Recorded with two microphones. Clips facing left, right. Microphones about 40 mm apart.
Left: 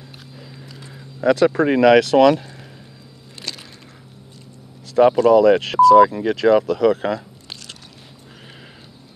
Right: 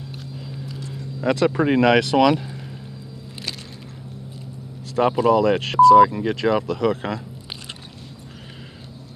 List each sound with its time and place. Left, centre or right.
0.4 s horse: centre
0.7 s a sound: centre
1.2 s speech: centre
5.1 s speech: centre